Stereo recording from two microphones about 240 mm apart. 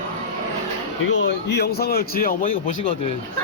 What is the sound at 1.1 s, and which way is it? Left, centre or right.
A man's voice, left.